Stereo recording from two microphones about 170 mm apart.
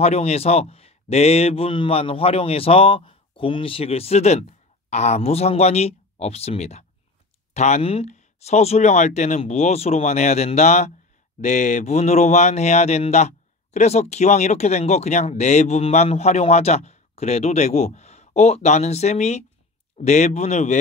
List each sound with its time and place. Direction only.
0.0 s a man's voice: 40° left (ahead or behind)